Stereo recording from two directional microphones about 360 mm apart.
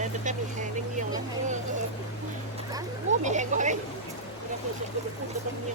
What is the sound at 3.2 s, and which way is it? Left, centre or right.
Speech, centre.